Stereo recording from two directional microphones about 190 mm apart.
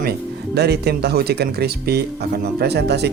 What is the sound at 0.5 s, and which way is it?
Speech, 60° right (ahead or behind).